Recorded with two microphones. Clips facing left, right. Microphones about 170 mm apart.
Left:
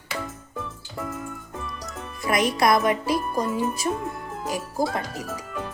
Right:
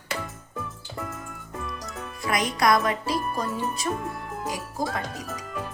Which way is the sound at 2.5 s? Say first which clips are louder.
Even; 25° left (ahead or behind).